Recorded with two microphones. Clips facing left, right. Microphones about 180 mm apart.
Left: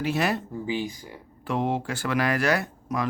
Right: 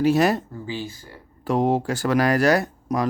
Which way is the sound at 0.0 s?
40° right (ahead or behind).